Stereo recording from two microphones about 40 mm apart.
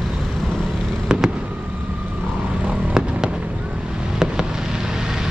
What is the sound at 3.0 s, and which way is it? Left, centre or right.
Fireworks, centre.